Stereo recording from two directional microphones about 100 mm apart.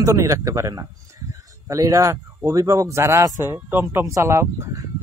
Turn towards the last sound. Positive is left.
turn(degrees=-35)  # may be behind; listen again after turning